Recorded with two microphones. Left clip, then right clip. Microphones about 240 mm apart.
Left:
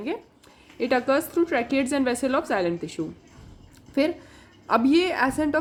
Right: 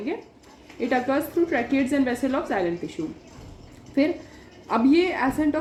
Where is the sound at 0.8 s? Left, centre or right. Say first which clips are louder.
Left 1 dB; left.